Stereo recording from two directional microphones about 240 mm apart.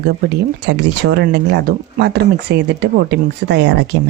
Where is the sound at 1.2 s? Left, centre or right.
Right.